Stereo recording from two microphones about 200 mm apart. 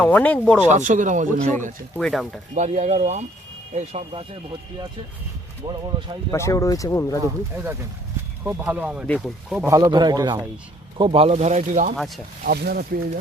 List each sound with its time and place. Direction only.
0.0 s speech: 5° left (ahead or behind)
0.7 s speech: 40° right (ahead or behind)
2.0 s speech: centre (ahead or behind)
2.6 s speech: 35° right (ahead or behind)
6.3 s speech: 15° left (ahead or behind)
7.2 s a man's voice: 10° right (ahead or behind)
9.6 s a man's voice: 15° right (ahead or behind); by 11.9 s 40° right (ahead or behind)
11.9 s speech: centre (ahead or behind)
12.5 s speech: 50° right (ahead or behind)